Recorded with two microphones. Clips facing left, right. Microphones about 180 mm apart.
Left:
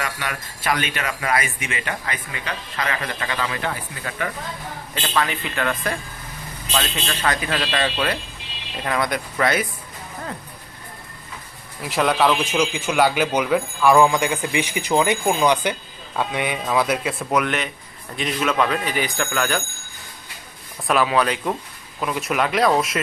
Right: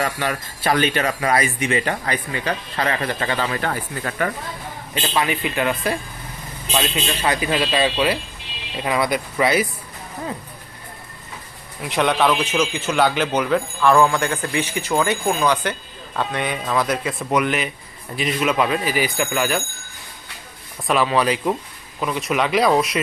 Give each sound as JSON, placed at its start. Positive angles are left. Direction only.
{"t": 0.0, "sound": "speech", "side_deg": -35}
{"t": 5.0, "sound": "speech", "side_deg": -15}
{"t": 11.8, "sound": "a man's voice", "side_deg": 0}
{"t": 20.8, "sound": "speech", "side_deg": 0}